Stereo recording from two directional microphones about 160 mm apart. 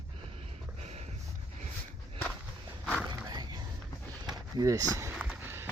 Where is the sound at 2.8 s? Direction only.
5° left (ahead or behind).